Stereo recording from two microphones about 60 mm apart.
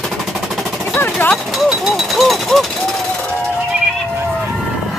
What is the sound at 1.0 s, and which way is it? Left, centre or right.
Speech, left.